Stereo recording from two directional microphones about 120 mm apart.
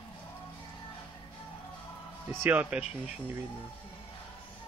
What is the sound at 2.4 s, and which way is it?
Speech, 15° right (ahead or behind).